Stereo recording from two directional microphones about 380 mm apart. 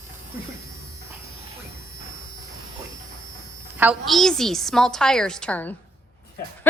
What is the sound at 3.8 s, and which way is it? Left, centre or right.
A woman's voice, centre.